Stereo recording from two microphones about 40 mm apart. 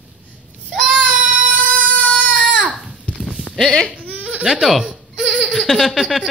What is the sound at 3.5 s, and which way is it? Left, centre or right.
Speech, centre.